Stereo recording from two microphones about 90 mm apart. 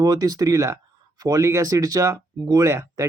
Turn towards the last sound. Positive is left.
turn(degrees=-35)  # may be behind; listen again after turning